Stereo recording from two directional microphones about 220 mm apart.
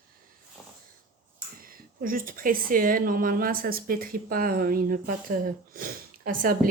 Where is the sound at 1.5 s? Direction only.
40° right (ahead or behind).